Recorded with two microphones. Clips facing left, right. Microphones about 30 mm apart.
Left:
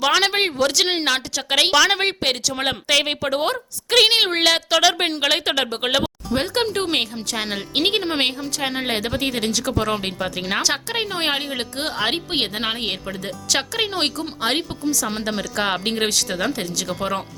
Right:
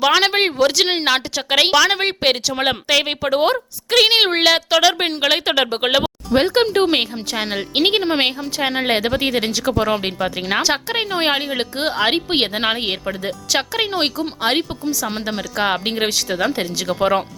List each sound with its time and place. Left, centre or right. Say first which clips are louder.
0.0 s a woman's voice: right 3 dB; centre